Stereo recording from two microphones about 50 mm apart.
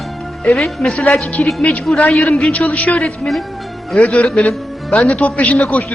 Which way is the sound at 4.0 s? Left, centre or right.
Left.